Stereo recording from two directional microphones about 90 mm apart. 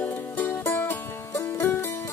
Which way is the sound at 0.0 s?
20° left (ahead or behind).